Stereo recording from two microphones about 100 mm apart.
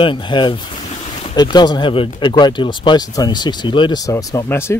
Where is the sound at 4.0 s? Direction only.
35° left (ahead or behind).